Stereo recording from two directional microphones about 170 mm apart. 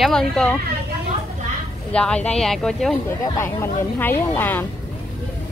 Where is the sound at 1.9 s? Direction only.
5° left (ahead or behind).